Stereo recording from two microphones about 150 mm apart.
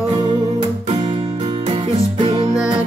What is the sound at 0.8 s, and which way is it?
Music, 45° right (ahead or behind).